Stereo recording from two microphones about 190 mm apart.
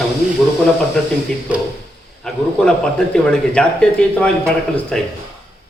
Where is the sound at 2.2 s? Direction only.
5° left (ahead or behind).